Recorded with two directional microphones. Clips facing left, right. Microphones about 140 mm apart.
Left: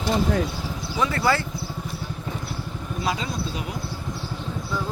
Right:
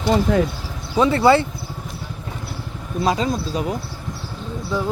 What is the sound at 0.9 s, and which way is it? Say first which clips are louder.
Speech: right 8 dB; 25° right (ahead or behind).